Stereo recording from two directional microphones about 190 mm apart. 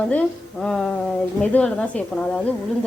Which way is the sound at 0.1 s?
5° left (ahead or behind).